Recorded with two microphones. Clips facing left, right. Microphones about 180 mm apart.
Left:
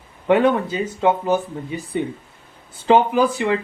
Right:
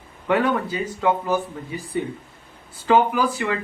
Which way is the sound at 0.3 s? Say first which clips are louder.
Left 4 dB; 20° left (ahead or behind).